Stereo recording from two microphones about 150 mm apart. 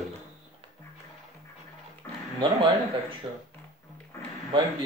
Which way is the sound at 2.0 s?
20° left (ahead or behind).